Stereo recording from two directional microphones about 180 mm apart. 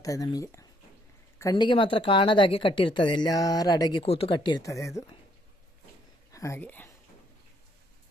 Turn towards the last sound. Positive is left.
turn(degrees=10)  # may be behind; listen again after turning